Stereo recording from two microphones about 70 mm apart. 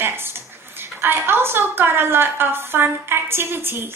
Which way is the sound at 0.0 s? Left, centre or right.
Right.